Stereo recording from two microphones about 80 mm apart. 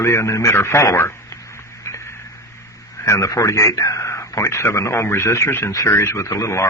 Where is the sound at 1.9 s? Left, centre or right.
Left.